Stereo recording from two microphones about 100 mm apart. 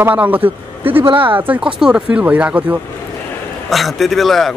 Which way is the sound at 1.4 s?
10° right (ahead or behind).